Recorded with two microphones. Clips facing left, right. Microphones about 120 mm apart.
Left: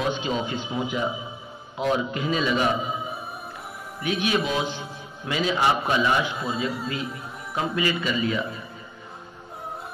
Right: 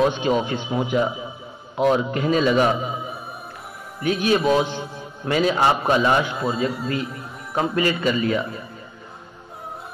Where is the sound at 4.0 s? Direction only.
40° right (ahead or behind).